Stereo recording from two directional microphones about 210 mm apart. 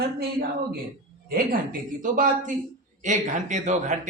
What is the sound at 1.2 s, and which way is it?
A man's voice, 45° right (ahead or behind).